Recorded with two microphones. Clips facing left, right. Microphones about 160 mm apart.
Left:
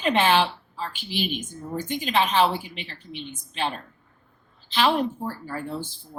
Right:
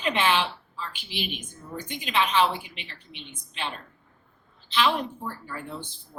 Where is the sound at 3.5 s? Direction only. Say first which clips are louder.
Left 6 dB; 35° left (ahead or behind).